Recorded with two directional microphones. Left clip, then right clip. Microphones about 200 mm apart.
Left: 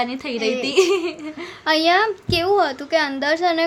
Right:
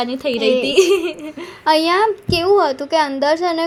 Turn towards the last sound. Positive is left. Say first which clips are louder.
# right 2 dB
turn(degrees=0)  # may be behind; listen again after turning